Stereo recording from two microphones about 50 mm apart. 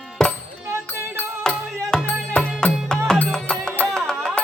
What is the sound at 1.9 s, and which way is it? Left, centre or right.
Music, centre.